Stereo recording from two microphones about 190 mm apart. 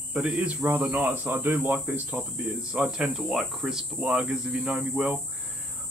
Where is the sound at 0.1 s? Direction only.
5° right (ahead or behind).